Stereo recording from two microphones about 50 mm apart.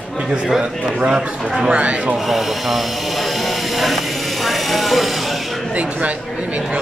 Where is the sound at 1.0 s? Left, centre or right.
Centre.